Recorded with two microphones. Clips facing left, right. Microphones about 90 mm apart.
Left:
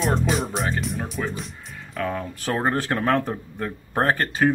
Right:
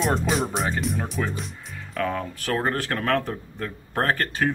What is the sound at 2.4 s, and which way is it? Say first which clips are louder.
Speech: left 2 dB; 25° left (ahead or behind).